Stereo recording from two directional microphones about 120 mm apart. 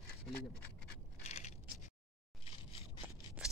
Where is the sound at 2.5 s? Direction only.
50° left (ahead or behind).